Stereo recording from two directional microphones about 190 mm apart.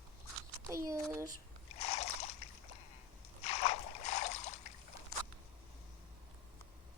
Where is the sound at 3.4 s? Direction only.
35° left (ahead or behind).